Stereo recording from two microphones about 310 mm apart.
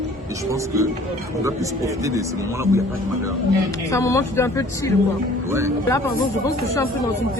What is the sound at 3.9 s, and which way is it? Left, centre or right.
Speech, centre.